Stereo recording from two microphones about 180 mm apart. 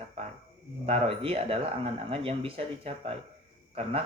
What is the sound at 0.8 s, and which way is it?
Speech, 35° right (ahead or behind).